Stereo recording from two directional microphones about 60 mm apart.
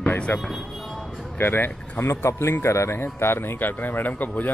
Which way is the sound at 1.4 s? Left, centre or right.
Left.